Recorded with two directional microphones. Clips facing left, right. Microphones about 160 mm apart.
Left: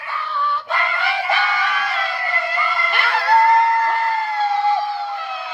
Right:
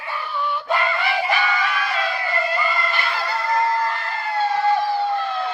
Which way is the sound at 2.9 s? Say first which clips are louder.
Left 6 dB; 65° left (ahead or behind).